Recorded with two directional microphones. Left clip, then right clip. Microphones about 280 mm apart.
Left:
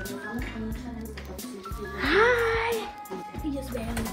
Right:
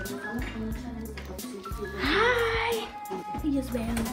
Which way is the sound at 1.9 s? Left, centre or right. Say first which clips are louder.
Left 3 dB; left.